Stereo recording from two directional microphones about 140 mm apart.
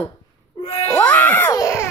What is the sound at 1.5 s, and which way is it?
Baby cry, 25° left (ahead or behind).